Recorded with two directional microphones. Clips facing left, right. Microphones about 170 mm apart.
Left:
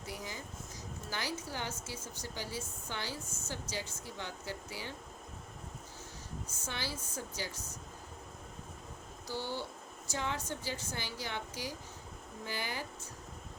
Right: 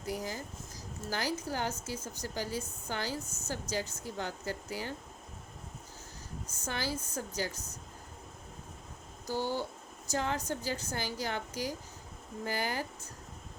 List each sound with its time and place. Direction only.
0.1 s a sound: 40° right (ahead or behind)
1.0 s speech: 45° right (ahead or behind)
6.7 s speech: 45° right (ahead or behind)
9.2 s speech: 45° right (ahead or behind)